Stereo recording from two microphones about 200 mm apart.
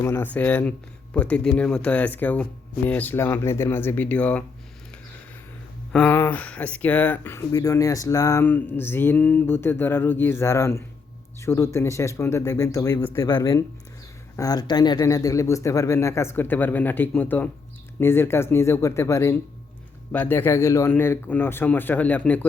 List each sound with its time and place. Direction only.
0.0 s speech: 10° left (ahead or behind)
5.9 s speech: 5° left (ahead or behind)